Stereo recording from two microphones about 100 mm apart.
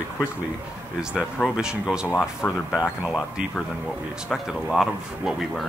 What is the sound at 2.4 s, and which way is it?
Speech, 15° left (ahead or behind).